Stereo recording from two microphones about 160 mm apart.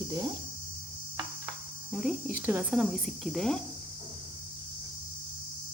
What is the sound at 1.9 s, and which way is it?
Speech, 5° right (ahead or behind).